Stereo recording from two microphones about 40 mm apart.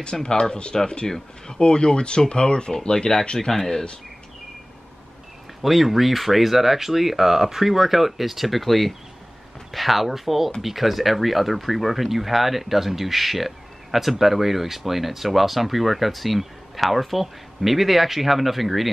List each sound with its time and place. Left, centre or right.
0.0 s speech: centre
5.6 s speech: centre